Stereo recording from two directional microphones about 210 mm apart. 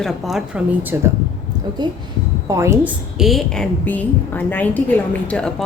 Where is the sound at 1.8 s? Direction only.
20° right (ahead or behind).